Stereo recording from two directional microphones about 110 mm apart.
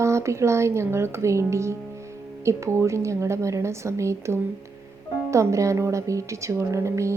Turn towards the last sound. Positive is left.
turn(degrees=-25)  # may be behind; listen again after turning